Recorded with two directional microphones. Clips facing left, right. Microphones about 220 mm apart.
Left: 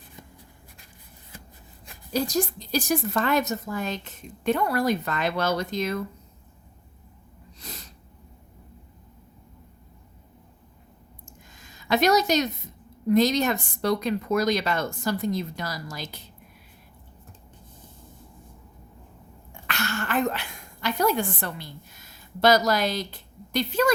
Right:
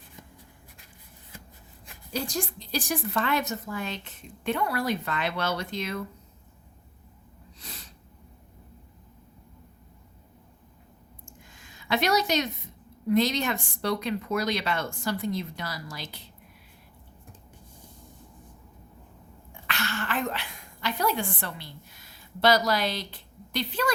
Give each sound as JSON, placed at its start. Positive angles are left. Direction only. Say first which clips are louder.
{"t": 2.1, "sound": "a woman's voice", "louder": "left 6 dB", "side_deg": 40}
{"t": 7.6, "sound": "sneeze", "louder": "left 4 dB", "side_deg": 40}
{"t": 11.5, "sound": "a sound", "louder": "left 4 dB", "side_deg": 40}
{"t": 13.1, "sound": "a woman's voice", "louder": "left 4 dB", "side_deg": 40}
{"t": 19.6, "sound": "a woman's voice", "louder": "left 2 dB", "side_deg": 45}